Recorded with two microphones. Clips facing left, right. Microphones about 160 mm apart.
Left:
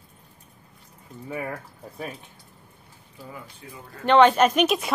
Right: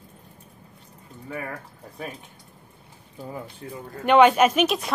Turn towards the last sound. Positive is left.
turn(degrees=0)  # may be behind; listen again after turning